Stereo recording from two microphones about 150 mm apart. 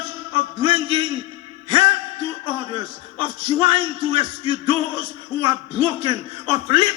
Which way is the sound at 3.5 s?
35° right (ahead or behind).